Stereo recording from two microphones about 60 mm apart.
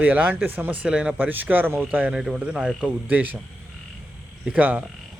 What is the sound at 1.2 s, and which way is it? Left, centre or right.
Speech, right.